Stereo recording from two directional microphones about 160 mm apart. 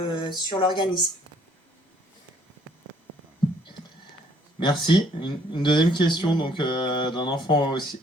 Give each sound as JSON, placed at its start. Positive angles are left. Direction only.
{"t": 0.0, "sound": "speech", "side_deg": 30}
{"t": 4.6, "sound": "speech", "side_deg": 30}